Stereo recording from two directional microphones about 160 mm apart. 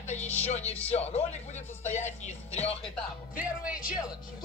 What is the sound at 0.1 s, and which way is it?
Speech, 45° left (ahead or behind).